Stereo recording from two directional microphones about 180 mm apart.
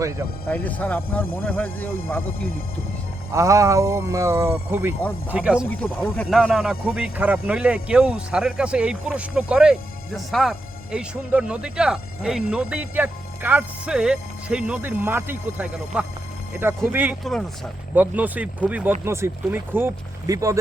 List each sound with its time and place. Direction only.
0.4 s speech: 10° left (ahead or behind)
3.3 s speech: 15° right (ahead or behind)
5.6 s speech: 5° left (ahead or behind); by 20.6 s 20° right (ahead or behind)